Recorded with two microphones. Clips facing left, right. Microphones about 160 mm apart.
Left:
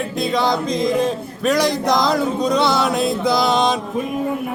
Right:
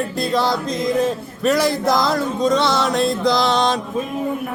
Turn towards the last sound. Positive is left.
turn(degrees=0)  # may be behind; listen again after turning